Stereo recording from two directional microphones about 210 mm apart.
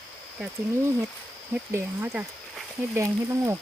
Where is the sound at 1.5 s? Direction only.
10° right (ahead or behind).